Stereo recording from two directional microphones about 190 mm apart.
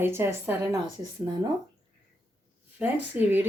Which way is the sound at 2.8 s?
10° right (ahead or behind).